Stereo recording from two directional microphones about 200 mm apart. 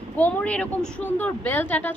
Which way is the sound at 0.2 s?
5° left (ahead or behind).